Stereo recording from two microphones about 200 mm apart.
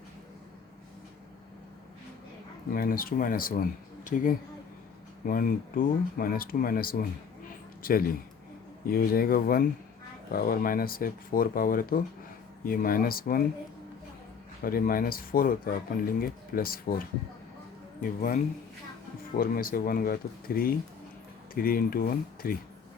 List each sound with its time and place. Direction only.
2.7 s speech: 45° left (ahead or behind)
14.6 s speech: 45° left (ahead or behind)
18.0 s speech: 40° left (ahead or behind)